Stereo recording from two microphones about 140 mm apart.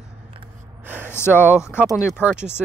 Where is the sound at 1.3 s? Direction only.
10° right (ahead or behind).